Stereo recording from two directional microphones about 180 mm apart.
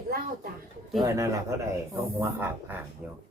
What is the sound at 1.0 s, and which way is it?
Speech, 15° right (ahead or behind).